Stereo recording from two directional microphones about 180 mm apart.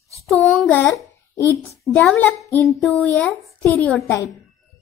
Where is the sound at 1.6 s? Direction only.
10° left (ahead or behind).